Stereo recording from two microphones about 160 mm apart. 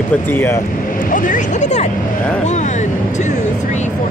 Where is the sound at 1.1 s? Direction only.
50° left (ahead or behind).